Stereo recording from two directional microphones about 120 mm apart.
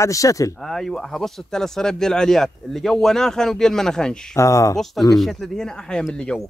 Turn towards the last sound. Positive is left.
turn(degrees=5)  # may be behind; listen again after turning